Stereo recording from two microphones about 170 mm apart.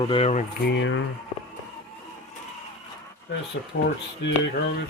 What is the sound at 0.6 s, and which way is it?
Speech, 90° left.